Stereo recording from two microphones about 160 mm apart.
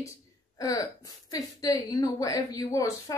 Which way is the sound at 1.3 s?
20° left (ahead or behind).